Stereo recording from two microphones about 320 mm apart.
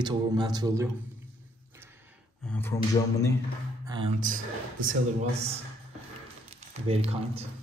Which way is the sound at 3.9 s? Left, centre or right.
Centre.